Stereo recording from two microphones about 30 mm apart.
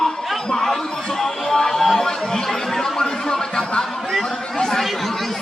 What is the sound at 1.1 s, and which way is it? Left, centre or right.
Music, centre.